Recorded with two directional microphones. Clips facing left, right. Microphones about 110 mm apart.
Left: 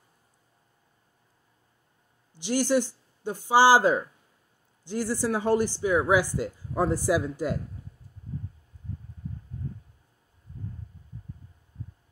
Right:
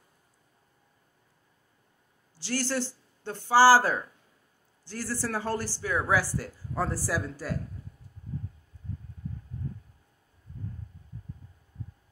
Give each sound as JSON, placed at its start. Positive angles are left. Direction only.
{"t": 2.3, "sound": "speech", "side_deg": 15}